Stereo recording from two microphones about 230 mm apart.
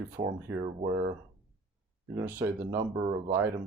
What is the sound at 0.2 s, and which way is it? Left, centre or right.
Speech, right.